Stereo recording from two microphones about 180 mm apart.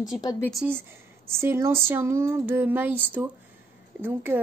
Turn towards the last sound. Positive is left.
turn(degrees=-10)  # may be behind; listen again after turning